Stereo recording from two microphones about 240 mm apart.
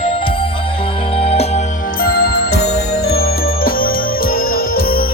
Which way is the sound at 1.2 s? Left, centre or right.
Left.